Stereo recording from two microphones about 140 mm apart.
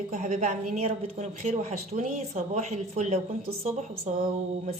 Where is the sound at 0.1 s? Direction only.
55° right (ahead or behind).